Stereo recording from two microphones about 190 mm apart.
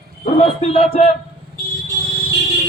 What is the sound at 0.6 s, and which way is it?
Speech, 35° left (ahead or behind).